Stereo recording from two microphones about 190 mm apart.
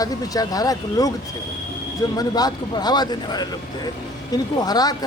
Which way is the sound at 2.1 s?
20° left (ahead or behind).